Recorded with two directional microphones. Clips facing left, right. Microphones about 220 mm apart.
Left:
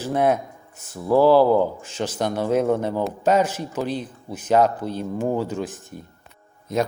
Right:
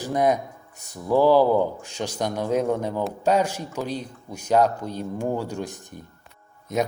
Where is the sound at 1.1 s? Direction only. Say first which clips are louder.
Left 2 dB; 15° right (ahead or behind).